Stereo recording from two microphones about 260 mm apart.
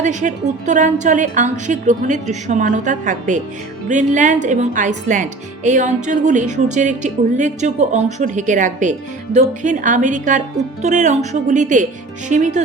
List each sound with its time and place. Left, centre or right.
0.0 s a woman's voice: right